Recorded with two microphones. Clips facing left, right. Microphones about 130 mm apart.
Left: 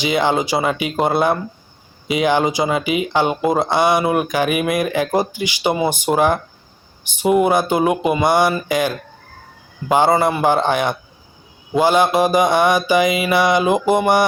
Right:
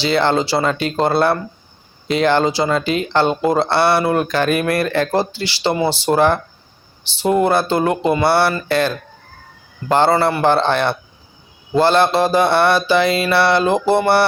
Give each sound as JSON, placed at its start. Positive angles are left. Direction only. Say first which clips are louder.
{"t": 0.0, "sound": "speech", "louder": "right 1 dB", "side_deg": 15}
{"t": 9.9, "sound": "speech", "louder": "even", "side_deg": 15}